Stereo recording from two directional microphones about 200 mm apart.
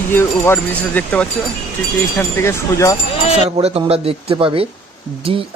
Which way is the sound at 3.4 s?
30° right (ahead or behind).